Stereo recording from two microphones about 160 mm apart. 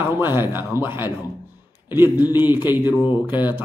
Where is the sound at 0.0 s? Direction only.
15° right (ahead or behind).